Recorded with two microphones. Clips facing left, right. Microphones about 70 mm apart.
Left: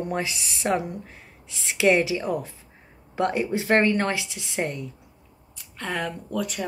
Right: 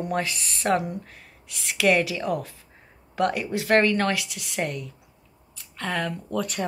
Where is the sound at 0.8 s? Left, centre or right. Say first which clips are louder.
Right 1 dB; left.